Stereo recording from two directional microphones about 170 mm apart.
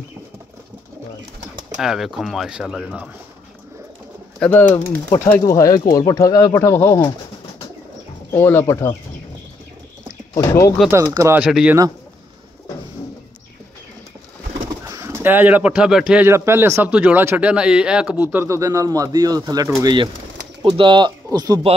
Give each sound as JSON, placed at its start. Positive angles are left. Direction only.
{"t": 1.8, "sound": "speech", "side_deg": 0}
{"t": 4.4, "sound": "speech", "side_deg": 10}
{"t": 8.3, "sound": "speech", "side_deg": 15}
{"t": 10.3, "sound": "speech", "side_deg": 20}
{"t": 10.9, "sound": "a man's voice", "side_deg": -20}
{"t": 11.4, "sound": "a man's voice", "side_deg": -5}
{"t": 14.9, "sound": "a man's voice", "side_deg": -15}